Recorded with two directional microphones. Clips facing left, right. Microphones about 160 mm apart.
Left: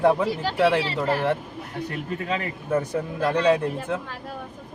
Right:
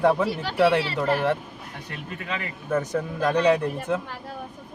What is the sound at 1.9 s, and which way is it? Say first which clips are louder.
Speech: left 4 dB; 35° left (ahead or behind).